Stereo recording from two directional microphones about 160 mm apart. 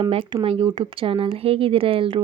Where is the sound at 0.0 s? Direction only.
35° right (ahead or behind).